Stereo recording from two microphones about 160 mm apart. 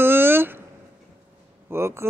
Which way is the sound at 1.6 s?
15° right (ahead or behind).